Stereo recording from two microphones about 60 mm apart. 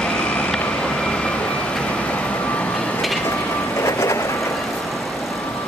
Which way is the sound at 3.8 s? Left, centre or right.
Left.